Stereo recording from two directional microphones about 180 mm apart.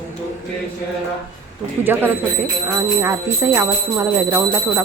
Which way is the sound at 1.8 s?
10° right (ahead or behind).